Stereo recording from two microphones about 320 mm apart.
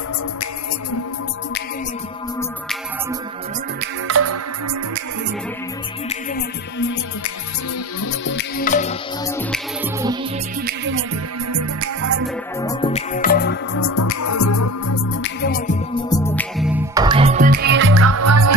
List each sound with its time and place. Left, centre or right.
4.1 s music: right
8.0 s music: left
10.6 s music: right
11.5 s music: right
12.6 s music: centre
13.8 s music: left
15.2 s music: left
15.9 s music: centre; by 18.5 s right